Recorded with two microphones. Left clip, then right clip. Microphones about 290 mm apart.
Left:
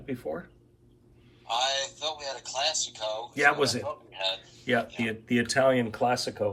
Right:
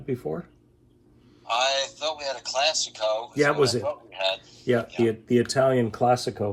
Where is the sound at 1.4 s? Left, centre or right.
Right.